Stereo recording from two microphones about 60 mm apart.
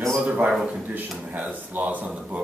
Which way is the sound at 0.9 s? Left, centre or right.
Right.